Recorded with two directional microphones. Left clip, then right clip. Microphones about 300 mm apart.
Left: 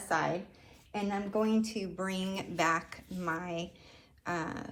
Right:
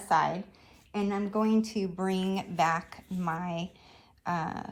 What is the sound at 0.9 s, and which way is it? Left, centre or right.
Speech, right.